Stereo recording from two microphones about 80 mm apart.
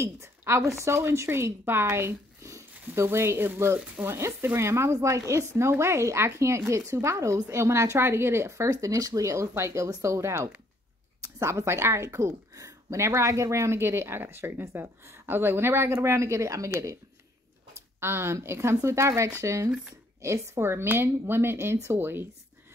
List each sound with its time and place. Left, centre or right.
0.0 s a woman's voice: right
17.7 s speech: right